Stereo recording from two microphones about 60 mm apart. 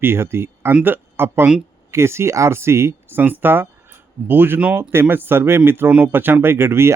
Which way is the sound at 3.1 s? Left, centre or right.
Right.